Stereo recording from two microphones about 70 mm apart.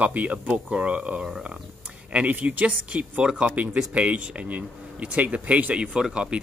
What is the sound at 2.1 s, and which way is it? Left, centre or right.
Speech, right.